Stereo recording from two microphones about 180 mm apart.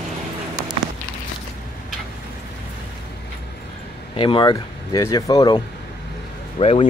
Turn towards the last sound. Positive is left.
turn(degrees=35)  # may be behind; listen again after turning